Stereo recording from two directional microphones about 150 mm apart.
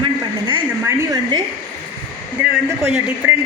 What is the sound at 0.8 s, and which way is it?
Speech, 25° right (ahead or behind).